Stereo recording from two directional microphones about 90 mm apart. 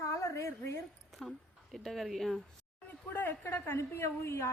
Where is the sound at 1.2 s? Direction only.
5° left (ahead or behind).